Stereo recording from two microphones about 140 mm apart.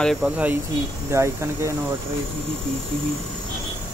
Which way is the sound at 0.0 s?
5° left (ahead or behind).